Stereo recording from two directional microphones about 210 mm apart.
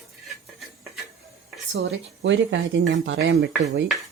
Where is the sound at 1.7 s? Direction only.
55° right (ahead or behind).